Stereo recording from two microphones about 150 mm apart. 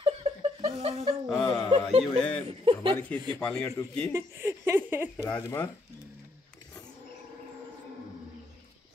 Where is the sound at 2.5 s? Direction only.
40° right (ahead or behind).